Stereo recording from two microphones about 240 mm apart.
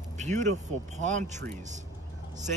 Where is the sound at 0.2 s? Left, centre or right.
Right.